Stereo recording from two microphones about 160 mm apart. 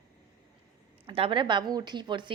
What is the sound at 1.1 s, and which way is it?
A woman's voice, 35° right (ahead or behind).